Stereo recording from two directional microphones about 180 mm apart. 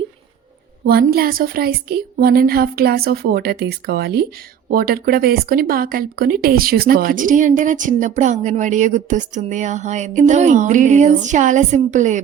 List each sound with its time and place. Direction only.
0.9 s a woman's voice: 55° right (ahead or behind)